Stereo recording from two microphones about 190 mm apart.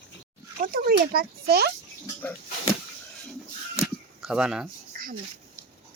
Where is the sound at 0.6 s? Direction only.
50° right (ahead or behind).